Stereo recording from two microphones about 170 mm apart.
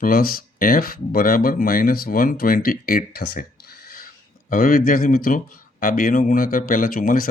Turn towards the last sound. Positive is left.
turn(degrees=55)  # may be behind; listen again after turning